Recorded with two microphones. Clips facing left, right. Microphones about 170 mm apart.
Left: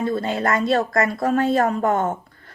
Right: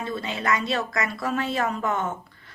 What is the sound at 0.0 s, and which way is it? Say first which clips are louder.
Speech: left 7 dB; 50° left (ahead or behind).